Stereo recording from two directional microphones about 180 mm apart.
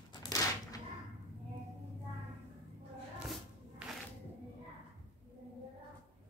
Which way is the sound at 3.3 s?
Centre (ahead or behind).